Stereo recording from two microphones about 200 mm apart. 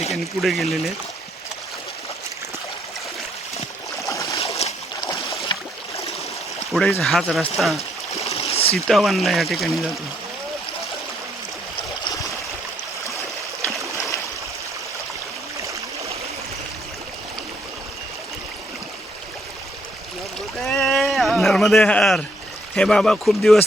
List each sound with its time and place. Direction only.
0.1 s speech: centre (ahead or behind)
4.1 s a sound: 15° left (ahead or behind)
4.4 s boat: 30° left (ahead or behind)
5.5 s a sound: 20° left (ahead or behind)
6.7 s speech: centre (ahead or behind)
7.8 s stream: 30° left (ahead or behind)
8.9 s speech: centre (ahead or behind)
20.6 s a sound: centre (ahead or behind)
22.7 s speech: centre (ahead or behind)